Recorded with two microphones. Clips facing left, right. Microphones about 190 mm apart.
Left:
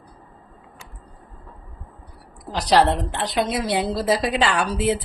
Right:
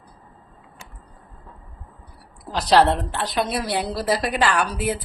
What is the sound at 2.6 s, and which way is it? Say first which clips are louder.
A woman's voice: right 1 dB; 15° left (ahead or behind).